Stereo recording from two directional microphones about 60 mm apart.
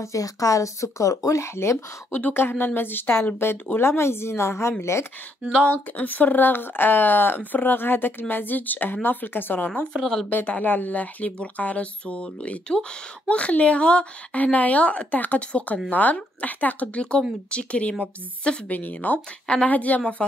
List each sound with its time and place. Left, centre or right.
0.0 s speech: left
2.1 s a woman's voice: left
5.7 s speech: left
18.7 s speech: left
20.2 s speech: centre